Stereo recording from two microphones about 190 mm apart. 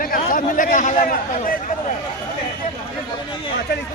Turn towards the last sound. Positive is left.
turn(degrees=60)  # may be behind; listen again after turning